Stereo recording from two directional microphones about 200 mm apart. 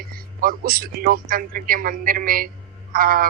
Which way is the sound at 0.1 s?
45° right (ahead or behind).